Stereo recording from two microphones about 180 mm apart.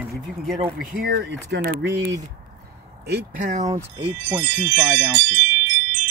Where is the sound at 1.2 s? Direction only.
75° right (ahead or behind).